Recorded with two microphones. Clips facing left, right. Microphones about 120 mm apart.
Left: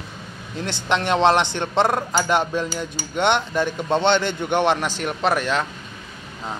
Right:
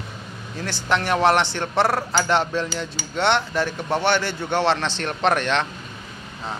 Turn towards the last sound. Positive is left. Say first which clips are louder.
# even
turn(degrees=5)  # may be behind; listen again after turning